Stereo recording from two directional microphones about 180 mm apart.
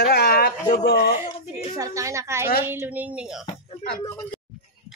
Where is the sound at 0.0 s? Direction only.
60° left (ahead or behind).